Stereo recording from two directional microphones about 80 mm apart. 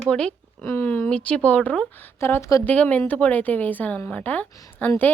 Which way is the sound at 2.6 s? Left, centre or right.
Centre.